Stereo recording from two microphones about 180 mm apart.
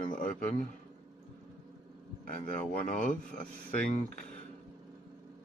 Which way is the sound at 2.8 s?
45° left (ahead or behind).